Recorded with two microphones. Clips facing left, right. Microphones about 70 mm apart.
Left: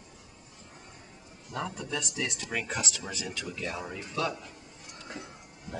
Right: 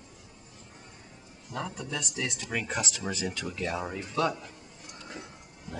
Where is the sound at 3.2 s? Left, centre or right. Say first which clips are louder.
Right 2 dB; right.